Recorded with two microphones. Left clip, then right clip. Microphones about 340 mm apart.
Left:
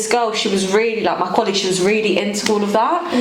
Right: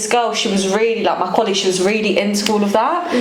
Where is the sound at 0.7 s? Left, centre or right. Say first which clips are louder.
Right 1 dB; left.